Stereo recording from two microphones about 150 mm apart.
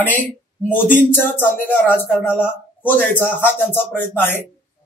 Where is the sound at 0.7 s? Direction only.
15° left (ahead or behind).